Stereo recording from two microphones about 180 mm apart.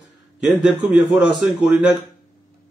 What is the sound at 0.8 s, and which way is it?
A man's voice, centre (ahead or behind).